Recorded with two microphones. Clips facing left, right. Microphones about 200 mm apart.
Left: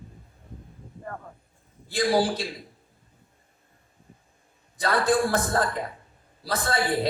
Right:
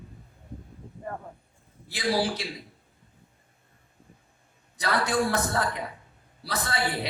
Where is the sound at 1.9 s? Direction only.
55° left (ahead or behind).